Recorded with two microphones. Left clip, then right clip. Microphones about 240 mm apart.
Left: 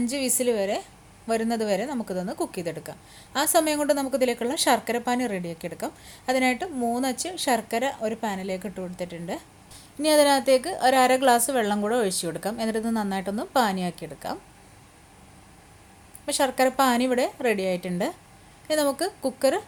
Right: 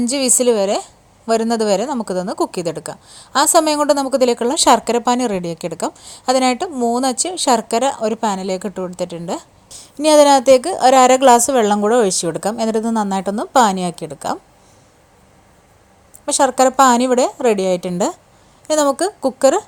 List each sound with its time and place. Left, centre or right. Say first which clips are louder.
0.0 s speech: right 10 dB; right
16.2 s speech: right 9 dB; right